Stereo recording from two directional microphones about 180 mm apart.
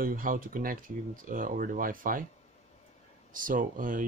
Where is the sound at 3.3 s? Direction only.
50° right (ahead or behind).